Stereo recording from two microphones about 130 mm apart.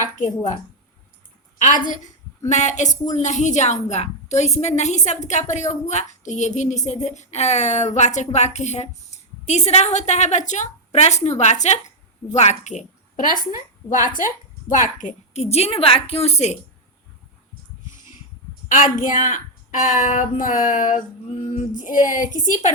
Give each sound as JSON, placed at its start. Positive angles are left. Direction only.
{"t": 0.0, "sound": "a woman's voice", "side_deg": 80}
{"t": 2.5, "sound": "a woman's voice", "side_deg": 65}
{"t": 13.8, "sound": "a woman's voice", "side_deg": 20}
{"t": 14.2, "sound": "a woman's voice", "side_deg": 80}
{"t": 18.7, "sound": "a woman's voice", "side_deg": 90}
{"t": 21.8, "sound": "a sound", "side_deg": 90}